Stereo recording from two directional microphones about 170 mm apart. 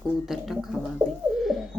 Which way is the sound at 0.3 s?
Centre (ahead or behind).